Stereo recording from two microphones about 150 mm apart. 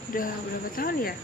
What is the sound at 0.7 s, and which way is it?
Speech, 80° left.